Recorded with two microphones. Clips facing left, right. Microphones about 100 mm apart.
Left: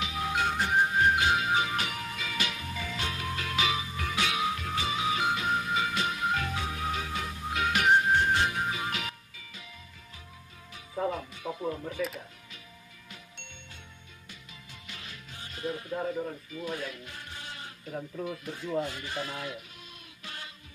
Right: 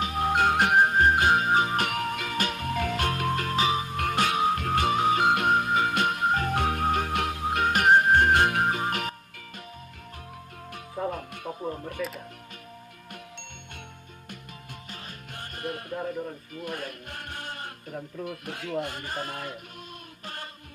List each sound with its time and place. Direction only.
0.0 s music: 50° right (ahead or behind)
3.8 s music: 55° right (ahead or behind)
6.6 s music: 55° right (ahead or behind)
11.0 s music: centre (ahead or behind)
12.0 s speech: 5° right (ahead or behind)
14.9 s music: 45° right (ahead or behind)
15.3 s music: 55° right (ahead or behind)
15.9 s speech: centre (ahead or behind)
16.5 s music: 55° right (ahead or behind)
17.9 s speech: centre (ahead or behind)
18.3 s speech: 65° right (ahead or behind); by 19.6 s 50° right (ahead or behind)